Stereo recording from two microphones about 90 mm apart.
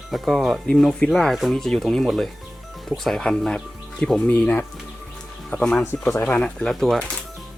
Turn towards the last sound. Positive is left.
turn(degrees=5)  # may be behind; listen again after turning